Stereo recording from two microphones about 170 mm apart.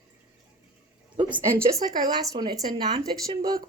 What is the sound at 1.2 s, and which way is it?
Speech, 15° right (ahead or behind).